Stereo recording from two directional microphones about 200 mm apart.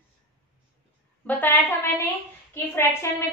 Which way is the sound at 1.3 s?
10° left (ahead or behind).